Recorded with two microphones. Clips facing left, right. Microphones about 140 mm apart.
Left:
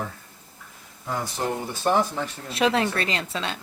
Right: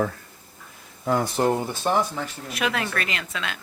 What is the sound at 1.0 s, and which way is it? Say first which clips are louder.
Speech: right 6 dB; 55° right (ahead or behind).